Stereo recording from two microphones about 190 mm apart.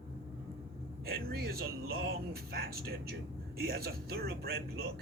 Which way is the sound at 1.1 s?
55° right (ahead or behind).